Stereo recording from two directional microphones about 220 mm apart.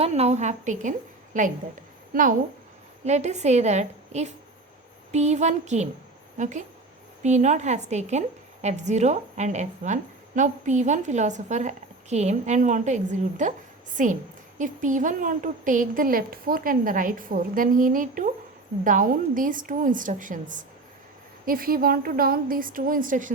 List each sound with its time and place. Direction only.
0.0 s a woman's voice: 30° right (ahead or behind)